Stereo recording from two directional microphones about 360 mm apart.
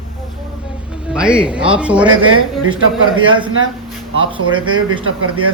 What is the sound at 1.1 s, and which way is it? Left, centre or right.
Speech, centre.